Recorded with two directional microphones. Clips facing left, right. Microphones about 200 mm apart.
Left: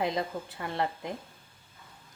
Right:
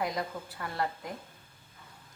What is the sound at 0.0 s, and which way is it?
A woman's voice, 25° left (ahead or behind).